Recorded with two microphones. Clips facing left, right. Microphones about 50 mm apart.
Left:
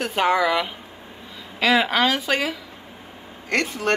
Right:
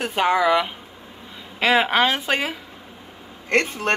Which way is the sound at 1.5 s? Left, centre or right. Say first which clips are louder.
Right 1 dB; right.